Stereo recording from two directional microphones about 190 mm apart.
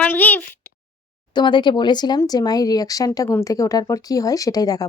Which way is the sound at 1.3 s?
25° left (ahead or behind).